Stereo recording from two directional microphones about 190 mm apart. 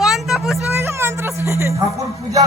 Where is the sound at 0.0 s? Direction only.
Centre (ahead or behind).